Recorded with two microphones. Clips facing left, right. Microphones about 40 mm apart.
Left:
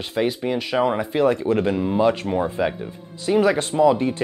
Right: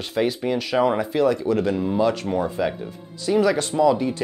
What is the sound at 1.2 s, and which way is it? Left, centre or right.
Speech, left.